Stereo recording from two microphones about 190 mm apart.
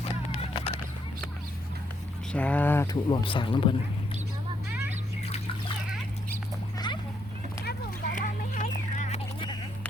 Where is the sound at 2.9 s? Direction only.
25° left (ahead or behind).